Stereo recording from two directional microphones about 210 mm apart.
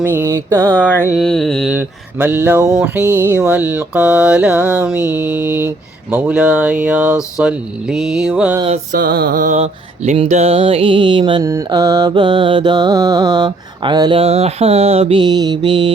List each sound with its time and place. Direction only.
0.0 s mantra: 10° right (ahead or behind)
0.7 s mantra: 5° left (ahead or behind)
8.6 s mantra: 35° right (ahead or behind)